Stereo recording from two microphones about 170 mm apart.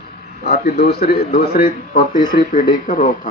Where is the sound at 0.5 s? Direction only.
40° left (ahead or behind).